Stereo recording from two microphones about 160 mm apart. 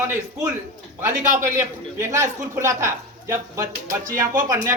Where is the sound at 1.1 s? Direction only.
55° right (ahead or behind).